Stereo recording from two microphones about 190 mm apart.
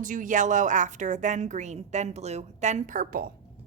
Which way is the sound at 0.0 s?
45° right (ahead or behind).